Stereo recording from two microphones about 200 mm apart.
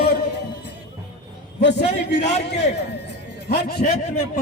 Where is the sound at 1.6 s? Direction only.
60° left (ahead or behind).